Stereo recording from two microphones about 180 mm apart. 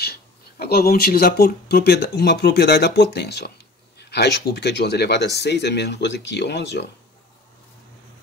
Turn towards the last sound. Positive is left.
turn(degrees=70)  # may be behind; listen again after turning